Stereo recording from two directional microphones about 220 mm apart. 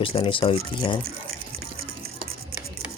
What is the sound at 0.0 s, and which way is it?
Speech, 25° left (ahead or behind).